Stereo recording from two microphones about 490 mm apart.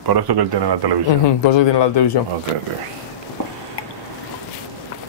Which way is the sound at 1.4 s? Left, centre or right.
Left.